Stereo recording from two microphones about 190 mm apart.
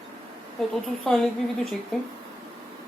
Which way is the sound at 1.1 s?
Centre (ahead or behind).